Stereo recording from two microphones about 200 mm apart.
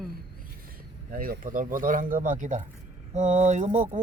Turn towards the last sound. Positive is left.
turn(degrees=-35)  # may be behind; listen again after turning